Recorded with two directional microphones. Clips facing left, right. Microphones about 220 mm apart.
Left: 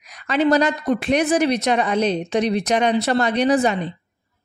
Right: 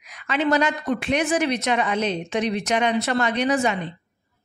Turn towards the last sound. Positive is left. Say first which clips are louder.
# left 4 dB
turn(degrees=35)  # may be behind; listen again after turning